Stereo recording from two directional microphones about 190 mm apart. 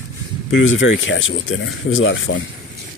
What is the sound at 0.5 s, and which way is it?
Speech, 90° left.